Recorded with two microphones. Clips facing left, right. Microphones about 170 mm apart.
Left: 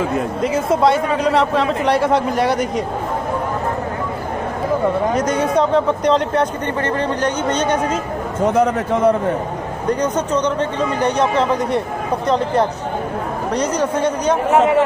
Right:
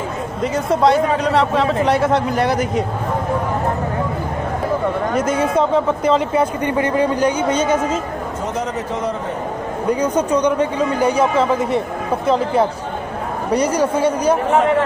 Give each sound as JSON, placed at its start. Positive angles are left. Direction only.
{"t": 0.4, "sound": "speech", "side_deg": 0}
{"t": 5.1, "sound": "speech", "side_deg": -5}
{"t": 8.5, "sound": "a man's voice", "side_deg": 55}
{"t": 9.8, "sound": "a man's voice", "side_deg": -10}